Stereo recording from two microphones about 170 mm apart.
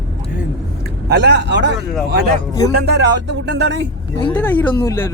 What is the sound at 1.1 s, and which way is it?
Speech, 90° right.